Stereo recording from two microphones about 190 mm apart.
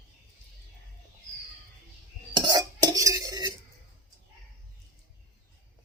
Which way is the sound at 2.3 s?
20° right (ahead or behind).